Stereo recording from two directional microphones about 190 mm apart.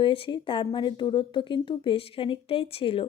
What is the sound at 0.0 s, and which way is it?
A woman's voice, 25° left (ahead or behind).